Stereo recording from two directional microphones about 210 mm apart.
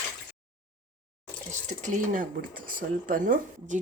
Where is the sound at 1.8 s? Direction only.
40° right (ahead or behind).